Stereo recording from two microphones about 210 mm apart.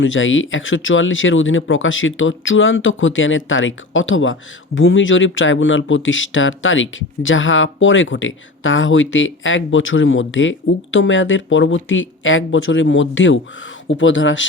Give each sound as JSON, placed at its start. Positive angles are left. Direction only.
{"t": 0.0, "sound": "speech", "side_deg": 65}